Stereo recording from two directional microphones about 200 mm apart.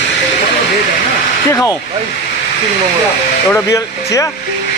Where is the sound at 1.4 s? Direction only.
15° left (ahead or behind).